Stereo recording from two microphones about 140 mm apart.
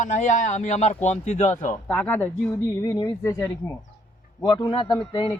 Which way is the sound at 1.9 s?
15° left (ahead or behind).